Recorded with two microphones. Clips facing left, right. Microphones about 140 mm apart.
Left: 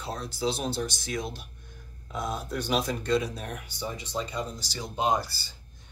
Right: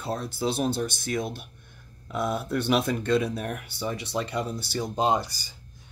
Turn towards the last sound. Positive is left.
turn(degrees=-15)  # may be behind; listen again after turning